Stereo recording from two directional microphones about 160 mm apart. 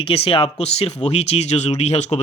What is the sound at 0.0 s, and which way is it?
Speech, 35° left (ahead or behind).